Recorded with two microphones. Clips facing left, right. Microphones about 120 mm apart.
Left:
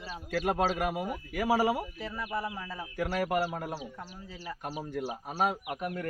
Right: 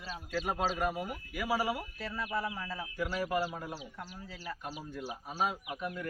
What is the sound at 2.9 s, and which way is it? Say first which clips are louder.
Speech: left 4 dB; 65° left (ahead or behind).